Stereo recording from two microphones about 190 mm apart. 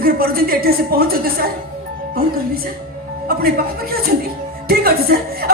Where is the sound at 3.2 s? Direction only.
55° right (ahead or behind).